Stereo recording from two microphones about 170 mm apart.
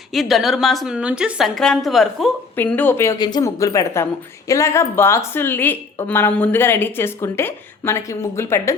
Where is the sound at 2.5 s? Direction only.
10° left (ahead or behind).